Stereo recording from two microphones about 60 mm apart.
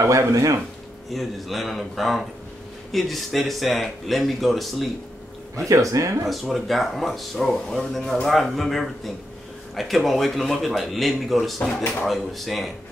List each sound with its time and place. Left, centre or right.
0.0 s speech: right
1.1 s speech: centre
5.7 s speech: right
6.2 s speech: centre